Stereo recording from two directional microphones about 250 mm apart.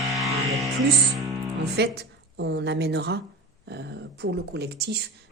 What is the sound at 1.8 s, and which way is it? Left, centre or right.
A woman's voice, right.